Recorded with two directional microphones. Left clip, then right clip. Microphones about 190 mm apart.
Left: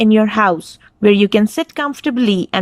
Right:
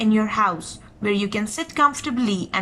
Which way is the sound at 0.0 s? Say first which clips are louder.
Left 7 dB; 50° left (ahead or behind).